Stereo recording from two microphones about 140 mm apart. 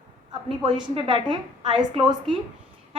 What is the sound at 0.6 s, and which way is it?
Speech, 35° right (ahead or behind).